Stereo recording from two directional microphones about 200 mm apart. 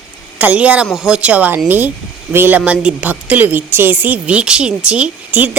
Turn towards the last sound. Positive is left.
turn(degrees=-10)  # may be behind; listen again after turning